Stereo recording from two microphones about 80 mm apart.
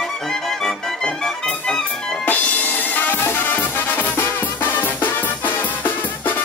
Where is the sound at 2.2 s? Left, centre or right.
Left.